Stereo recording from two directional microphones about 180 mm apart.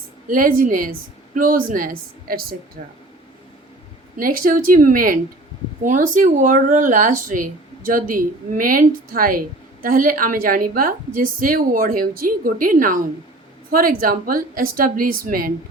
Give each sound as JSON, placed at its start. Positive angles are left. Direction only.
{"t": 0.3, "sound": "speech", "side_deg": -50}
{"t": 4.2, "sound": "speech", "side_deg": -50}